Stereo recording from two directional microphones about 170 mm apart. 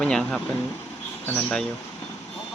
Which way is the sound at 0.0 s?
5° left (ahead or behind).